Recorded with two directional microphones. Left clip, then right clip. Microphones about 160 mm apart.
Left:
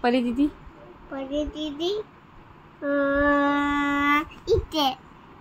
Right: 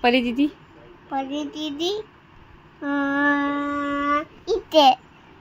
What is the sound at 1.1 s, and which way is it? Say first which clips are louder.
Child singing: right 2 dB; 90° right.